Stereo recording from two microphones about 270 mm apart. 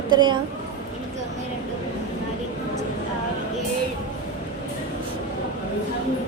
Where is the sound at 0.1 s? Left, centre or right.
Centre.